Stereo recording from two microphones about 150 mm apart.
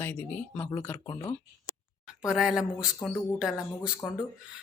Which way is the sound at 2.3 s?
5° right (ahead or behind).